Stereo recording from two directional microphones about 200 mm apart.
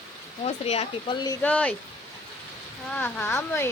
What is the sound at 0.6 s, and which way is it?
Speech, 30° left (ahead or behind).